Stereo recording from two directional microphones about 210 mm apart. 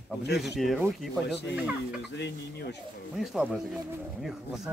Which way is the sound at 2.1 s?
55° left (ahead or behind).